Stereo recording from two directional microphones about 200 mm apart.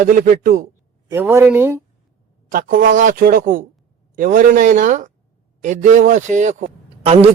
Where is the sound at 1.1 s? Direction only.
10° right (ahead or behind).